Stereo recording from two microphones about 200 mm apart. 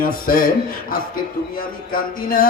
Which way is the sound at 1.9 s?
45° left (ahead or behind).